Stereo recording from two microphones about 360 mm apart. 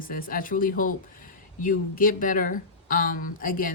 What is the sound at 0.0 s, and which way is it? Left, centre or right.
Speech, left.